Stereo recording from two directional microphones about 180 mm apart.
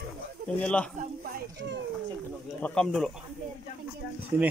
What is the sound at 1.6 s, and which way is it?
Speech, 80° right.